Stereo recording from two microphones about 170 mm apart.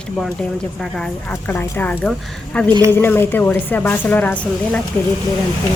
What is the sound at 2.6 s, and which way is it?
Speech, 25° right (ahead or behind).